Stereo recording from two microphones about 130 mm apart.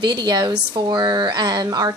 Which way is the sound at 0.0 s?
35° right (ahead or behind).